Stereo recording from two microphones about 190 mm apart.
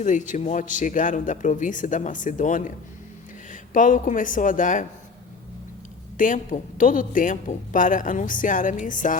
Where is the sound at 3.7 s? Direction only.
45° left (ahead or behind).